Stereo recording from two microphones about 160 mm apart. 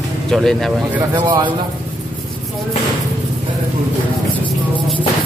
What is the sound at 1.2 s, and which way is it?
Speech, 30° right (ahead or behind).